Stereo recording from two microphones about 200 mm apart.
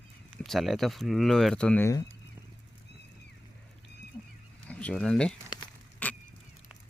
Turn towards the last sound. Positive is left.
turn(degrees=10)  # may be behind; listen again after turning